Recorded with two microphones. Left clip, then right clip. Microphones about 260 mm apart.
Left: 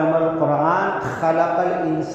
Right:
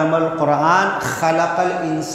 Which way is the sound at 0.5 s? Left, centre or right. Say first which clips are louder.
Right 3 dB; right.